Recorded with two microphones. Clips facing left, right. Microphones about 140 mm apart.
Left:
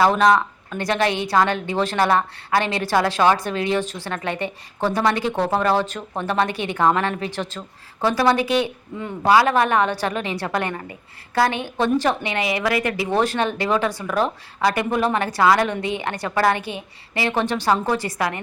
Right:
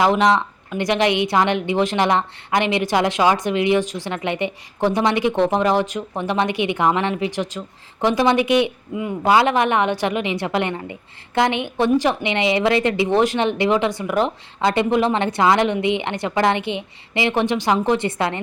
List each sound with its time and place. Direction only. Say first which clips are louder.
0.0 s a woman's voice: even; 15° right (ahead or behind)